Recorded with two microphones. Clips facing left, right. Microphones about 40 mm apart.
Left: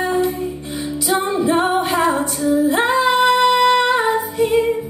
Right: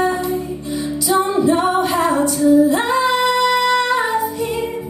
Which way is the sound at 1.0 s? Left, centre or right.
Left.